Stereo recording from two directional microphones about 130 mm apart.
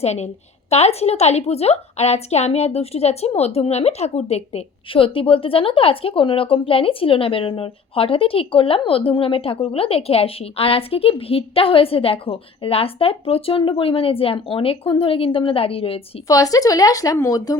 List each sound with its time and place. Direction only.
0.0 s a woman's voice: 55° left (ahead or behind)
16.2 s a woman's voice: 25° left (ahead or behind)